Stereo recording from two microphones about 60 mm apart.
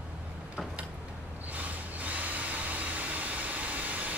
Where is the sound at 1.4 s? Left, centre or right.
Right.